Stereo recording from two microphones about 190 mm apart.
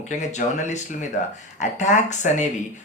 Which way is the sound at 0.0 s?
40° left (ahead or behind).